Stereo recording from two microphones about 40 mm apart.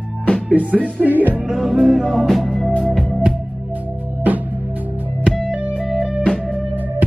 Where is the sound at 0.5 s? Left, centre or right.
Right.